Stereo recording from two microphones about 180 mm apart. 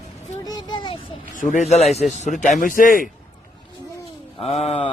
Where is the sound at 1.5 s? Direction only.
40° left (ahead or behind).